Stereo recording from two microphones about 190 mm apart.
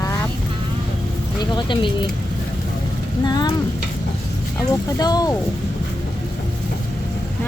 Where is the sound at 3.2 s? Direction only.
20° left (ahead or behind).